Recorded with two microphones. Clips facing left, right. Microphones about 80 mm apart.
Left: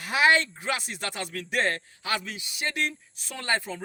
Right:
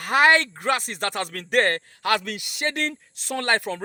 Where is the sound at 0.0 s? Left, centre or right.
Right.